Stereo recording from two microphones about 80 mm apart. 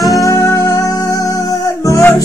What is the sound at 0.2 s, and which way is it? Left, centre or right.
Music, left.